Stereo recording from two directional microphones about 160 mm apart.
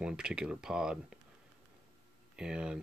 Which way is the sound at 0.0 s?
5° right (ahead or behind).